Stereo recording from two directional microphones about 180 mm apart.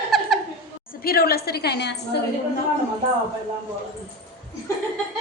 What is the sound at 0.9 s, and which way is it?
A woman's voice, 55° left (ahead or behind).